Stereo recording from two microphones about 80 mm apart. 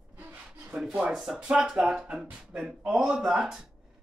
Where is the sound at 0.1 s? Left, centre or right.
Right.